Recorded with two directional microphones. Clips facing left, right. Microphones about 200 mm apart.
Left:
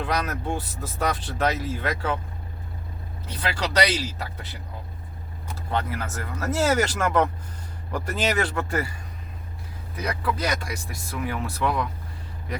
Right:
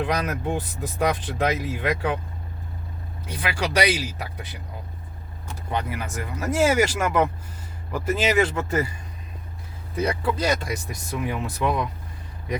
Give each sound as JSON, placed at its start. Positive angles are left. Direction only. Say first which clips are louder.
{"t": 0.0, "sound": "speech", "louder": "right 2 dB", "side_deg": -15}
{"t": 3.2, "sound": "speech", "louder": "right 1 dB", "side_deg": -10}
{"t": 5.7, "sound": "speech", "louder": "even", "side_deg": -15}
{"t": 8.4, "sound": "speech", "louder": "right 4 dB", "side_deg": -20}
{"t": 10.0, "sound": "speech", "louder": "right 4 dB", "side_deg": -30}